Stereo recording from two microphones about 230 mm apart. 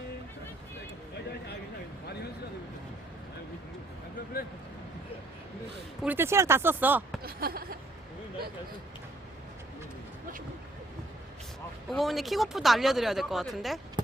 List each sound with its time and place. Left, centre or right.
6.0 s speech: centre
7.2 s a sound: right
11.9 s speech: centre